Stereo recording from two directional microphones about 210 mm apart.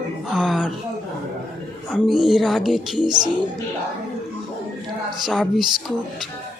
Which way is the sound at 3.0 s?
20° right (ahead or behind).